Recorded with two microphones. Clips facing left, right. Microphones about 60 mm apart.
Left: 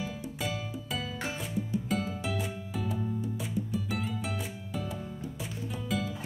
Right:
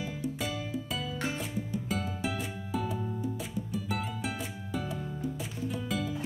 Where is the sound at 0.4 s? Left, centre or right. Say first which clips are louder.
Right 1 dB; centre.